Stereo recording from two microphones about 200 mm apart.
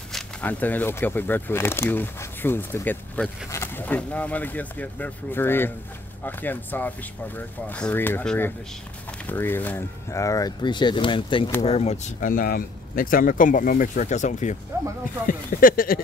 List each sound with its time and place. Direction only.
0.1 s speech: 10° left (ahead or behind); by 16.0 s 45° left (ahead or behind)